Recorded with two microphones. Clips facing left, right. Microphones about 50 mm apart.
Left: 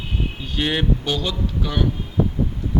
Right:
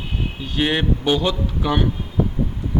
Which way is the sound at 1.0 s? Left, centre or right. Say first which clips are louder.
Right 5 dB; right.